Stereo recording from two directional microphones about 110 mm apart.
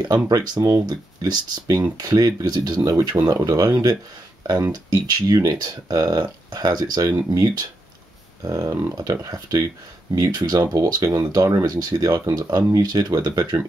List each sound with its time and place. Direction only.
0.3 s speech: 35° right (ahead or behind)